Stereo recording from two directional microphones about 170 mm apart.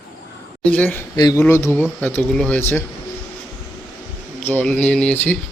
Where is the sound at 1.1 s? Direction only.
20° left (ahead or behind).